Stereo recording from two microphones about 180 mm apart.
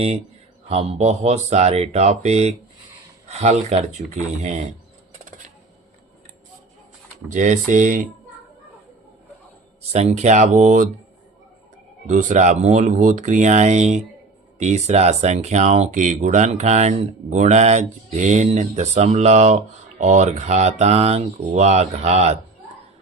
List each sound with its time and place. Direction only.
0.7 s speech: 35° right (ahead or behind)
7.3 s speech: 45° right (ahead or behind)
9.9 s speech: 40° right (ahead or behind)
12.0 s speech: 40° right (ahead or behind)